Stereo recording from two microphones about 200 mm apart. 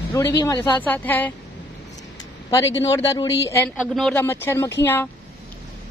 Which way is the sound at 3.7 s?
Centre (ahead or behind).